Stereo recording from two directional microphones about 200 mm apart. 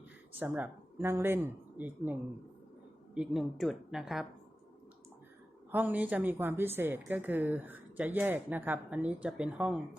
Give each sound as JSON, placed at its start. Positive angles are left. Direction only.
{"t": 0.3, "sound": "speech", "side_deg": -10}
{"t": 3.2, "sound": "speech", "side_deg": 0}
{"t": 5.7, "sound": "a woman's voice", "side_deg": -10}